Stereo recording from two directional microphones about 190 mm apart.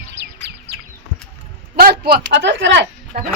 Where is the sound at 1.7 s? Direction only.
55° right (ahead or behind); by 2.8 s 70° right (ahead or behind).